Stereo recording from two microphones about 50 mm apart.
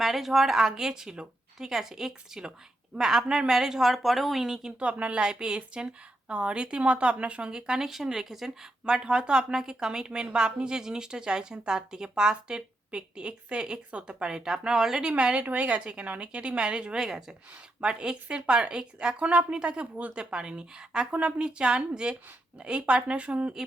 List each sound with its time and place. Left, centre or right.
0.0 s a woman's voice: centre
4.9 s a woman's voice: right
15.1 s a woman's voice: right
20.3 s a woman's voice: centre